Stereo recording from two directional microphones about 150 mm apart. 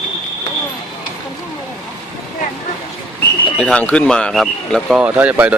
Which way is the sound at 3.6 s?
10° left (ahead or behind).